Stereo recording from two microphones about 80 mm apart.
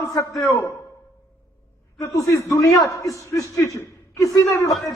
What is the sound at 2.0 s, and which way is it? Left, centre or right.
A man's voice, left.